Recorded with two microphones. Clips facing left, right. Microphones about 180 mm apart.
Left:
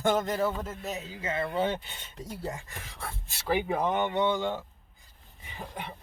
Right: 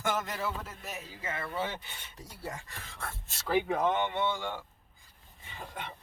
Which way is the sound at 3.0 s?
15° left (ahead or behind).